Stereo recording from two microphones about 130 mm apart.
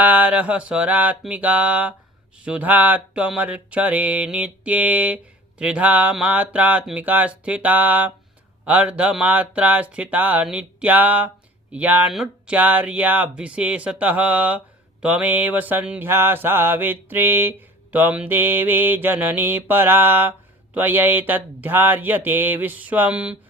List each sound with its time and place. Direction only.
0.0 s mantra: 10° right (ahead or behind)